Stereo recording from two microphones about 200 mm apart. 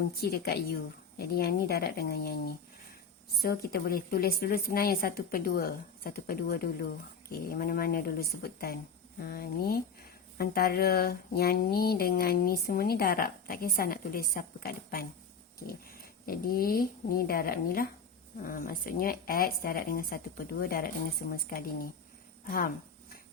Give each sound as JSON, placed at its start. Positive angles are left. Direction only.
{"t": 0.2, "sound": "speech", "side_deg": 55}
{"t": 3.4, "sound": "speech", "side_deg": 50}